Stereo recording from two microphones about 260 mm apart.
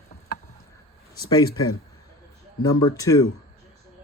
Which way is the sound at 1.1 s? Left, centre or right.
Centre.